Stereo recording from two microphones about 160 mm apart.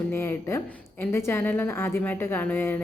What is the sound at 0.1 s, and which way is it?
A woman's voice, 15° left (ahead or behind).